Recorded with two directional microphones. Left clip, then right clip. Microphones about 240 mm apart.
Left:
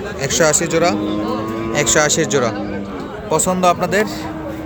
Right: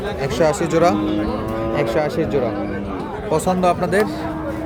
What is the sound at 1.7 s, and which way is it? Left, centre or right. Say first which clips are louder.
Speech: left 5 dB; centre.